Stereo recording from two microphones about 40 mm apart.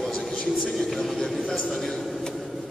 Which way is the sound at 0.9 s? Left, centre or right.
Centre.